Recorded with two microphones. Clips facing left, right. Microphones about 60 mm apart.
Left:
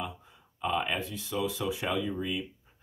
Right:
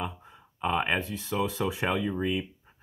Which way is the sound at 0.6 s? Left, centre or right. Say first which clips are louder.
Right 3 dB; right.